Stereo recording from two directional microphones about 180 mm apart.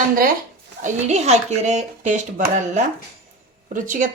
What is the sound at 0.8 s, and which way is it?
Speech, 40° right (ahead or behind).